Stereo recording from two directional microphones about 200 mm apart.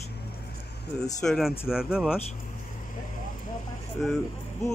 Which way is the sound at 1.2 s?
Centre (ahead or behind).